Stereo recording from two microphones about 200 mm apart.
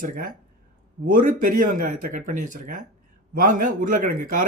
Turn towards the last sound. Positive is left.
turn(degrees=-45)  # may be behind; listen again after turning